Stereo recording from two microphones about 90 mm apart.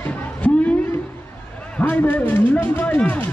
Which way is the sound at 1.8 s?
20° left (ahead or behind).